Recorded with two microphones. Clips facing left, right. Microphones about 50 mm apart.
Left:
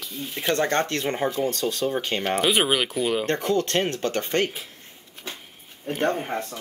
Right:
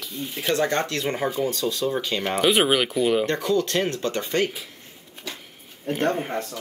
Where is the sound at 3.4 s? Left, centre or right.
Left.